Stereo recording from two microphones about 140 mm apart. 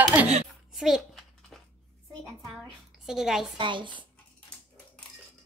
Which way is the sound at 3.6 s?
35° right (ahead or behind).